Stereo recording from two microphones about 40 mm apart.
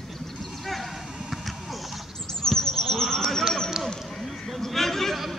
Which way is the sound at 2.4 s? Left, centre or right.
Centre.